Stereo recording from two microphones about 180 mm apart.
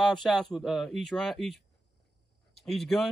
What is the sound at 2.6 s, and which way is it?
Speech, centre (ahead or behind).